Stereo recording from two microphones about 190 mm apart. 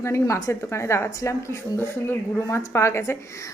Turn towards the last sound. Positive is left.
turn(degrees=15)  # may be behind; listen again after turning